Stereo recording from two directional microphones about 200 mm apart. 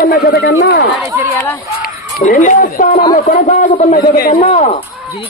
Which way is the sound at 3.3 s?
40° left (ahead or behind).